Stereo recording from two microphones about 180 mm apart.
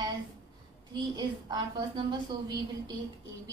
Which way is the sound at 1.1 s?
25° right (ahead or behind).